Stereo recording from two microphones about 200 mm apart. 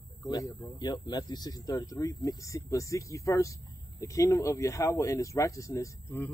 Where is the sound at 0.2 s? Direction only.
15° left (ahead or behind).